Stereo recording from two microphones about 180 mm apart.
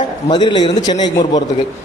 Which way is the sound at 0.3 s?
25° left (ahead or behind).